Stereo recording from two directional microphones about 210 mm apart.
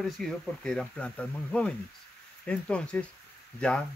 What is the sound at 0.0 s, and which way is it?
Speech, 5° left (ahead or behind).